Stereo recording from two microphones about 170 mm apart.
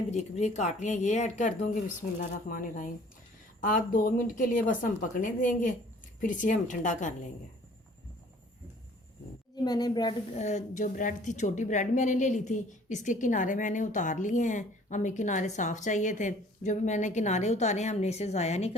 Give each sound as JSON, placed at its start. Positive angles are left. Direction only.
{"t": 0.1, "sound": "a woman's voice", "side_deg": 40}
{"t": 9.6, "sound": "speech", "side_deg": 25}
{"t": 10.3, "sound": "a woman's voice", "side_deg": 45}